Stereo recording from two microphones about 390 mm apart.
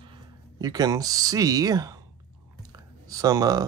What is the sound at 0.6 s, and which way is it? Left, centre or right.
Speech, centre.